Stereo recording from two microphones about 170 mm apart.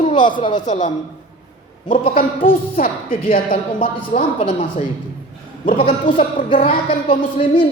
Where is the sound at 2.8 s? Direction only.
55° left (ahead or behind).